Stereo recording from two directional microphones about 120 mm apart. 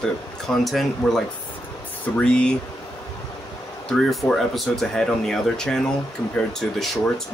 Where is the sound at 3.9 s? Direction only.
5° left (ahead or behind).